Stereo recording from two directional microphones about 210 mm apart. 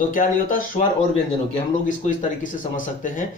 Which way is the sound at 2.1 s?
40° left (ahead or behind).